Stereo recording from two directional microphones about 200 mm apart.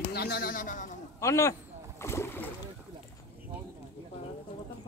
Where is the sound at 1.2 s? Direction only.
15° left (ahead or behind).